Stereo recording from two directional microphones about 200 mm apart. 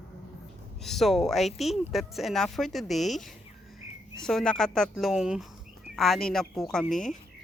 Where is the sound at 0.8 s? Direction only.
Centre (ahead or behind).